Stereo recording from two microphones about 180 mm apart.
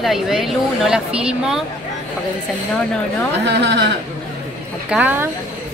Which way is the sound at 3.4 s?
70° right (ahead or behind).